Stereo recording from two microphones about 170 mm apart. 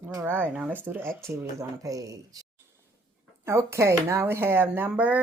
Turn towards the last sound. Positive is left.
turn(degrees=-10)  # may be behind; listen again after turning